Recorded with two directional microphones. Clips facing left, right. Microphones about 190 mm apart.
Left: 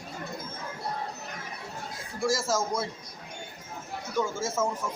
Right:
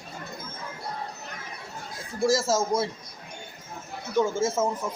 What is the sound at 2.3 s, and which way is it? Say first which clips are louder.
Speech: right 4 dB; 25° right (ahead or behind).